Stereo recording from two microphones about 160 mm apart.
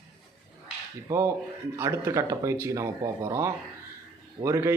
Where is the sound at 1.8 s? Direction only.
20° right (ahead or behind).